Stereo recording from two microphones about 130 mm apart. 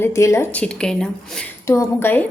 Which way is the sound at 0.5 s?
10° left (ahead or behind).